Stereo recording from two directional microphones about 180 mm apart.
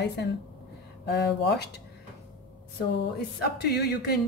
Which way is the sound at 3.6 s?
65° left (ahead or behind).